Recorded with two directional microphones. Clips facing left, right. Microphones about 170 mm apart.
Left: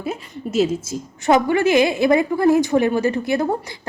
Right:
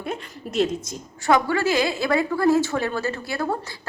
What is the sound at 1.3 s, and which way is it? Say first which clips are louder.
A woman's voice: left 5 dB; 20° left (ahead or behind).